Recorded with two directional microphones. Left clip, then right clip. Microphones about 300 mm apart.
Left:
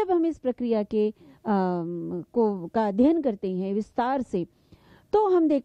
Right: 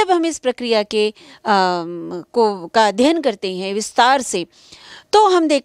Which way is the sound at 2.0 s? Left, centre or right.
Centre.